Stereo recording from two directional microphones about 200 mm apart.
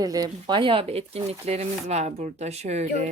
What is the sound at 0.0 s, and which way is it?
Speech, 20° right (ahead or behind).